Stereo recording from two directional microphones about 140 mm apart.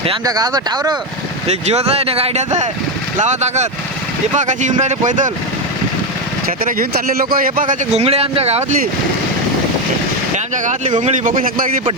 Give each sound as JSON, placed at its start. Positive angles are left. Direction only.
{"t": 0.3, "sound": "speech", "side_deg": -30}
{"t": 1.5, "sound": "speech", "side_deg": -50}
{"t": 6.7, "sound": "speech", "side_deg": -90}
{"t": 7.9, "sound": "speech", "side_deg": -45}
{"t": 10.3, "sound": "speech", "side_deg": -60}